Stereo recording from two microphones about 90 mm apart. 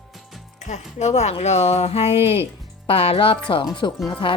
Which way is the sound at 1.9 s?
90° left.